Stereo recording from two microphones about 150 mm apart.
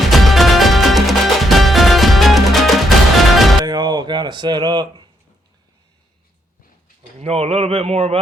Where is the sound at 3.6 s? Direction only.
30° right (ahead or behind).